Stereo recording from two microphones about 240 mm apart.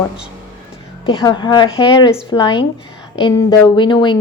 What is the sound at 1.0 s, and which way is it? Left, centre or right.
A woman's voice, centre.